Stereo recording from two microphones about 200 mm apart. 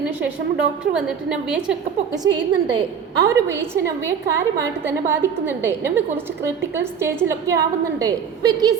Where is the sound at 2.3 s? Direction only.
65° right (ahead or behind).